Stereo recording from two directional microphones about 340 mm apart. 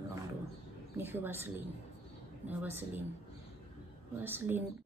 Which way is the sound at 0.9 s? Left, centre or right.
Centre.